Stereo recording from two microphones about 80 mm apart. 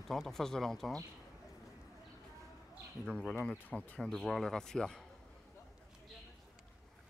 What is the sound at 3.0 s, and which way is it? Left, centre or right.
Speech, centre.